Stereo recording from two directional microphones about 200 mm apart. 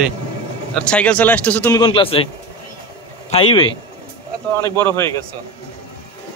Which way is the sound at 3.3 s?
30° left (ahead or behind).